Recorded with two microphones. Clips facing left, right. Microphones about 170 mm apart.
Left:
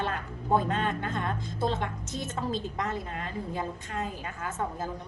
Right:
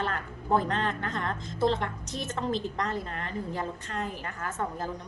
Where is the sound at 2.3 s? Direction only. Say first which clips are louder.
Right 2 dB; 10° left (ahead or behind).